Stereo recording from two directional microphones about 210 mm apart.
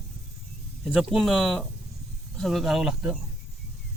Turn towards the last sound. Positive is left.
turn(degrees=0)  # may be behind; listen again after turning